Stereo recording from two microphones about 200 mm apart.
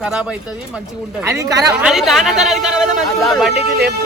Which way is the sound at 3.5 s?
55° right (ahead or behind).